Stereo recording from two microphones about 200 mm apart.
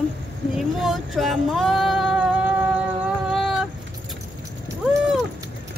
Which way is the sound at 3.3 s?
Centre (ahead or behind).